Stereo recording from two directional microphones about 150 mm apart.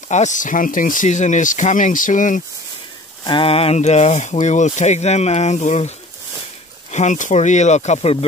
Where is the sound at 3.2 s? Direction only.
35° left (ahead or behind).